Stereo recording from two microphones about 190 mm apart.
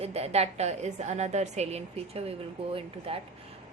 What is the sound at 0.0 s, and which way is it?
A woman's voice, 30° right (ahead or behind).